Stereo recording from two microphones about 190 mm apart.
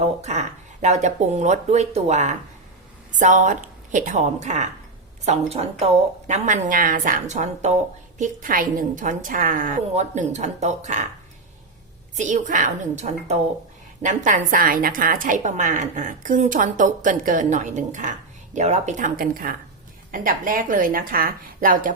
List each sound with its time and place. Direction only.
0.0 s a woman's voice: 35° right (ahead or behind)
12.1 s a woman's voice: 40° right (ahead or behind)